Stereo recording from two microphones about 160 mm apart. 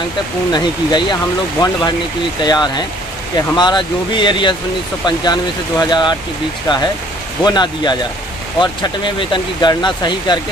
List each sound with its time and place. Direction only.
0.5 s speech: 25° left (ahead or behind)